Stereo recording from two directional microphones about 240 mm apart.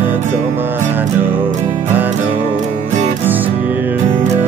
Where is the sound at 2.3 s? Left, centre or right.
Right.